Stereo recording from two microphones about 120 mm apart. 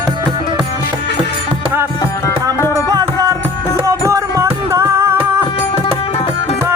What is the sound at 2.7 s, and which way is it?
Music, 30° right (ahead or behind).